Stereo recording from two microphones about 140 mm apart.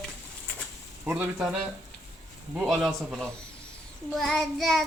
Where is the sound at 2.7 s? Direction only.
Centre (ahead or behind).